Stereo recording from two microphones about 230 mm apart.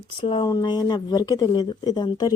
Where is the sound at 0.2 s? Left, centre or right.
Left.